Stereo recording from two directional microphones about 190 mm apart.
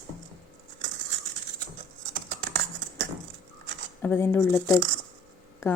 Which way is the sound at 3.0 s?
70° right (ahead or behind).